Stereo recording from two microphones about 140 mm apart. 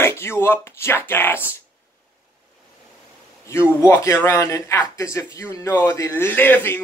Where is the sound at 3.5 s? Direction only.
15° left (ahead or behind).